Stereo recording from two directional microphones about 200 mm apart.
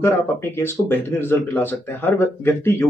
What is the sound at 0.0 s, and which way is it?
Speech, 10° left (ahead or behind).